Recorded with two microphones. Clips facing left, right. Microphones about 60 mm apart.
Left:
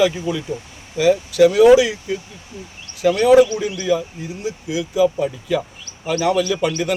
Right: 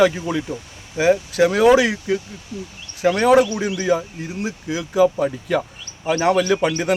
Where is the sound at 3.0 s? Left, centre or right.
Right.